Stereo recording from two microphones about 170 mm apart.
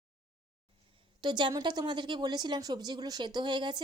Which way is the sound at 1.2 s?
25° right (ahead or behind).